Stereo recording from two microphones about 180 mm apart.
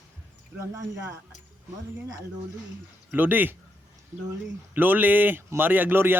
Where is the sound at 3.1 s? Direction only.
10° right (ahead or behind).